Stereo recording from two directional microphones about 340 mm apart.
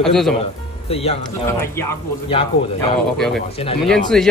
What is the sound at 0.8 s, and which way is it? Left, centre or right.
Speech, centre.